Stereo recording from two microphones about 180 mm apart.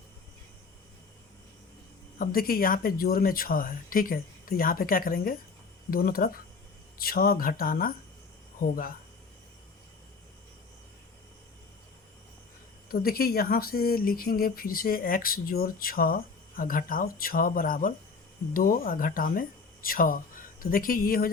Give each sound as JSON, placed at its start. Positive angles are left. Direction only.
{"t": 2.1, "sound": "speech", "side_deg": 55}
{"t": 12.9, "sound": "speech", "side_deg": 55}